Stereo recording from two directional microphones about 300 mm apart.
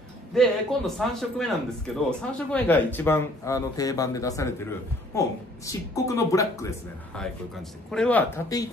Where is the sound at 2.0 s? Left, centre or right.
Centre.